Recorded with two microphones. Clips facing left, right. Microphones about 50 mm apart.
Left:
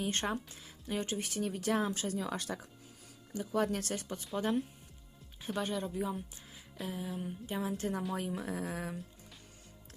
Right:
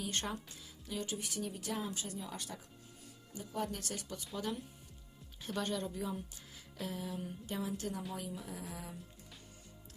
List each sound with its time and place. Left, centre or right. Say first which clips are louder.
0.0 s a woman's voice: left 5 dB; left
3.3 s a woman's voice: left 7 dB; left
5.5 s a woman's voice: left 2 dB; centre
7.6 s a woman's voice: left 5 dB; left
8.3 s speech: left 7 dB; left